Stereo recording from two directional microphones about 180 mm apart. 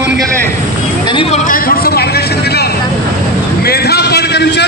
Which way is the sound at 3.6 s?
60° left (ahead or behind).